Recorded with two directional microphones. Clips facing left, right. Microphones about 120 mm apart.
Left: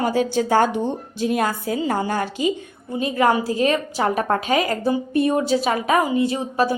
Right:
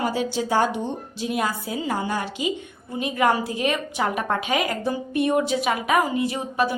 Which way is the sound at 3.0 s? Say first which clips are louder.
Left 3 dB; 30° left (ahead or behind).